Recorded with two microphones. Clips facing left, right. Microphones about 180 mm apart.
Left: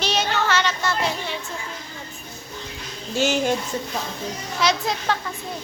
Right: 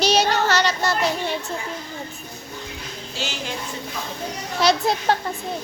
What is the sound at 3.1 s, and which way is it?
Speech, 50° left (ahead or behind).